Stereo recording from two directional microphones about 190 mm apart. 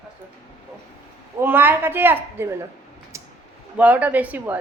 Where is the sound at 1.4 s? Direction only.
10° right (ahead or behind).